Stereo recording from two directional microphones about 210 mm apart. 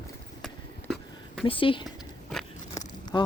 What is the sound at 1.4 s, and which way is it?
Speech, 25° left (ahead or behind).